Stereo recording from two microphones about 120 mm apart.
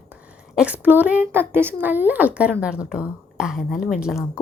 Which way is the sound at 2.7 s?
20° left (ahead or behind).